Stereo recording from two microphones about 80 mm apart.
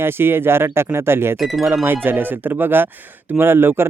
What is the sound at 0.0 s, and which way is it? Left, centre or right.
Speech, right.